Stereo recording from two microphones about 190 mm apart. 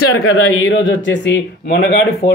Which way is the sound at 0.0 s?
90° left.